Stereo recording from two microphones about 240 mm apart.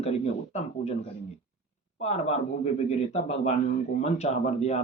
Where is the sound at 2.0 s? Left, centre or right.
Left.